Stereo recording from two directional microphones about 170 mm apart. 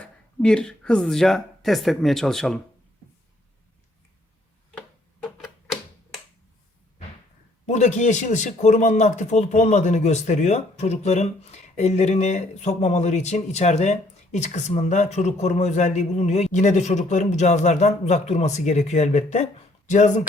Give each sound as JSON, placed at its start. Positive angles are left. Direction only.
{"t": 0.0, "sound": "speech", "side_deg": 5}
{"t": 5.2, "sound": "typewriter", "side_deg": 0}
{"t": 7.7, "sound": "speech", "side_deg": 45}